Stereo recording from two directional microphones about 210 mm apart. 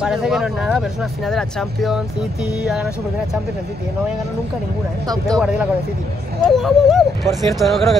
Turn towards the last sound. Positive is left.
turn(degrees=0)  # may be behind; listen again after turning